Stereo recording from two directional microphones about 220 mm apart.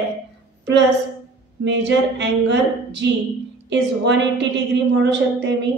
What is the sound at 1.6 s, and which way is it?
A woman's voice, 55° right (ahead or behind).